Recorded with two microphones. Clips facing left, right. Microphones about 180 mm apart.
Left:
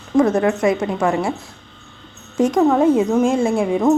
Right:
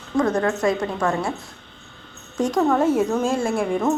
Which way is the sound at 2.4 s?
20° left (ahead or behind).